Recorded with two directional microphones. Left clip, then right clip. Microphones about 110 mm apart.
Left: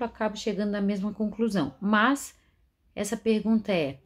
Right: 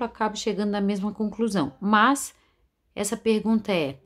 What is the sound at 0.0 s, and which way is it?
A woman's voice, 40° right (ahead or behind).